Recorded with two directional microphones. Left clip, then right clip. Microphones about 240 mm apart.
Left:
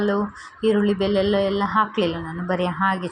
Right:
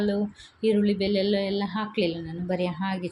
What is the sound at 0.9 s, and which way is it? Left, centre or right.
Speech, left.